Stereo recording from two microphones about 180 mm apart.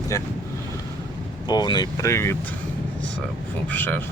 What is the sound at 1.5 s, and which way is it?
Speech, 25° left (ahead or behind).